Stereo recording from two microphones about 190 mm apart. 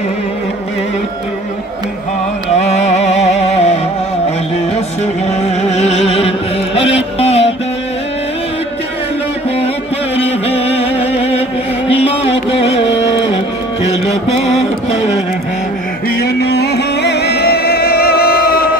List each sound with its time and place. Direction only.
2.5 s music: 35° left (ahead or behind)
5.6 s music: 35° left (ahead or behind)
10.1 s a sound: 30° left (ahead or behind)
11.9 s music: 30° left (ahead or behind)
14.0 s mantra: 35° left (ahead or behind)
16.2 s music: 60° left (ahead or behind)